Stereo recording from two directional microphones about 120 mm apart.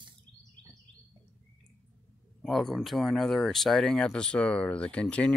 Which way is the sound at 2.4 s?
5° left (ahead or behind).